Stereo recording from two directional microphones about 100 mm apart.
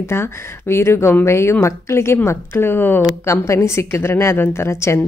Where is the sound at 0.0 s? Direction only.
25° left (ahead or behind).